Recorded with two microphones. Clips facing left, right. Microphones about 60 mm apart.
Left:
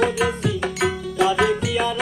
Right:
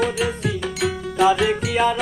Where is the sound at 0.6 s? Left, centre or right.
Left.